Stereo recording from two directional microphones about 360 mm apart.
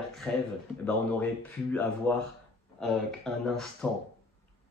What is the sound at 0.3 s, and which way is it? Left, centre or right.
Speech, centre.